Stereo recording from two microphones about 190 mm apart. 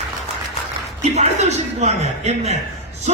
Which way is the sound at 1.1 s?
35° right (ahead or behind).